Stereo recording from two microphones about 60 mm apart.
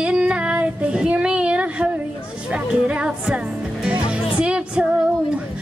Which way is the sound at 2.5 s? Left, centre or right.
Centre.